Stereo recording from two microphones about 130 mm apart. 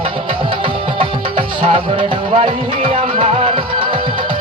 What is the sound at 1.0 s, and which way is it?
Music, 40° right (ahead or behind).